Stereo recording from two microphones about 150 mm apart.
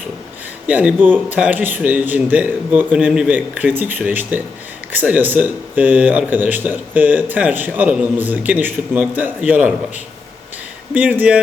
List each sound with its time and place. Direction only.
0.7 s speech: 10° right (ahead or behind)
10.9 s speech: 10° right (ahead or behind)